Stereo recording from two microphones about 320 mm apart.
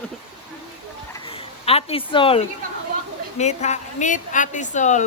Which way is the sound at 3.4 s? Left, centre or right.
Left.